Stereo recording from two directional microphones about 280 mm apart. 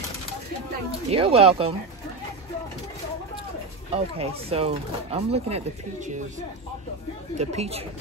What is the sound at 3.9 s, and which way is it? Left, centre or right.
Speech, right.